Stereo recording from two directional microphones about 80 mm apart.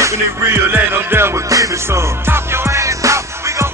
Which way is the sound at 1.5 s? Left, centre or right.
Right.